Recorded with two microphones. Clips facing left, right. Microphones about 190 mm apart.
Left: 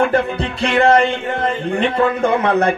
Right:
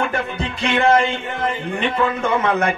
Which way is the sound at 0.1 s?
35° left (ahead or behind).